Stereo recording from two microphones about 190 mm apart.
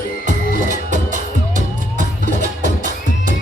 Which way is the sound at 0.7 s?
40° right (ahead or behind).